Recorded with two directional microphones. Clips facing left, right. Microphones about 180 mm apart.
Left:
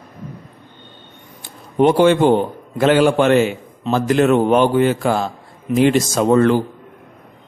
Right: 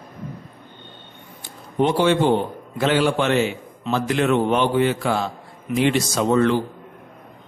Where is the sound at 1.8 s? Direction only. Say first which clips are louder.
Left 5 dB; 55° left (ahead or behind).